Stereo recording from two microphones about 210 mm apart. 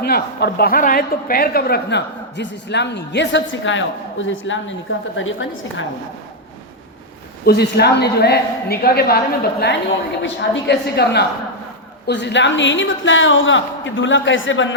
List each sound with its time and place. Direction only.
0.0 s a woman's voice: 50° left (ahead or behind); by 5.8 s 65° left (ahead or behind)
7.4 s a woman's voice: 50° left (ahead or behind)